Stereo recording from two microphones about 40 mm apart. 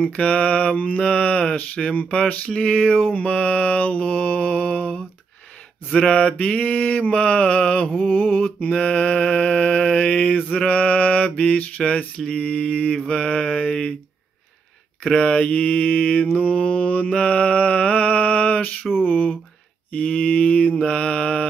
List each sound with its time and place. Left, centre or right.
0.1 s mantra: left
2.2 s mantra: left
5.9 s mantra: left
8.0 s mantra: left
8.6 s mantra: left
10.7 s mantra: left
15.0 s mantra: left